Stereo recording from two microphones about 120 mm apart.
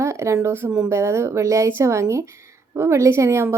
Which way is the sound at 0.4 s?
20° right (ahead or behind).